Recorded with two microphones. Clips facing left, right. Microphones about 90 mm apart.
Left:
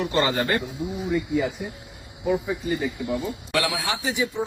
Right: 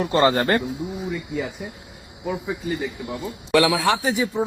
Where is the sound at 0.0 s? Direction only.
40° right (ahead or behind).